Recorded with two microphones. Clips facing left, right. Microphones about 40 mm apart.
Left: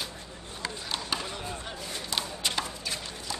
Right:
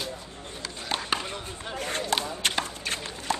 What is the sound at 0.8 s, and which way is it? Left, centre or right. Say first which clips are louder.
Chop: right 6 dB; right.